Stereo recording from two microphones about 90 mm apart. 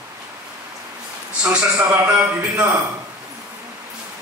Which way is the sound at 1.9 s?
20° right (ahead or behind).